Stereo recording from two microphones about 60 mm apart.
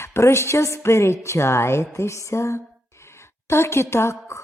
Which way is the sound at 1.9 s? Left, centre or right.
Left.